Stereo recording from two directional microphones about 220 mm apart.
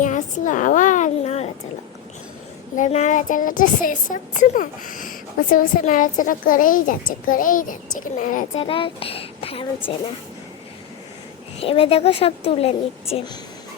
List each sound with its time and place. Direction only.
0.0 s a sound: 35° left (ahead or behind)
2.7 s a woman's voice: 35° left (ahead or behind)
8.6 s a woman's voice: 25° left (ahead or behind)
11.6 s a woman's voice: 25° left (ahead or behind)